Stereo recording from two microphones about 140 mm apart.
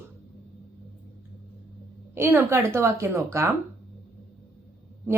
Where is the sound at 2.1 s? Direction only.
15° right (ahead or behind).